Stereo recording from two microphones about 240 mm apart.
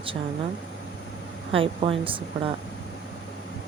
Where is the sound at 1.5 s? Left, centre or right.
Right.